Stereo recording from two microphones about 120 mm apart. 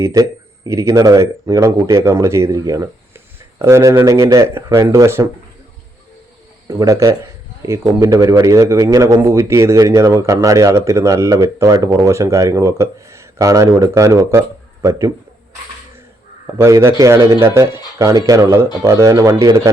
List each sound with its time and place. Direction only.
0.0 s a man's voice: 30° right (ahead or behind)
6.7 s a man's voice: 30° right (ahead or behind)
16.6 s a man's voice: 25° right (ahead or behind)